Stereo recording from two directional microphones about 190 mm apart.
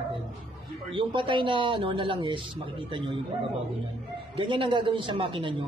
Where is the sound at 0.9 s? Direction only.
25° right (ahead or behind).